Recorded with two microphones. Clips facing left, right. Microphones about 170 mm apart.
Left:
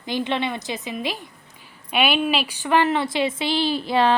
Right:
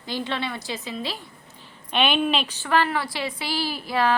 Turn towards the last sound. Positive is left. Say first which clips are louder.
# left 4 dB
turn(degrees=25)  # may be behind; listen again after turning